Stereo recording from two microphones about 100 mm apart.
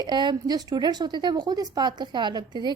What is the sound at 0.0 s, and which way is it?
A woman's voice, 45° right (ahead or behind).